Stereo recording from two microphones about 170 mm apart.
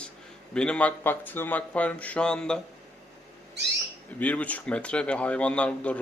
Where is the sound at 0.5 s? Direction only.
5° left (ahead or behind).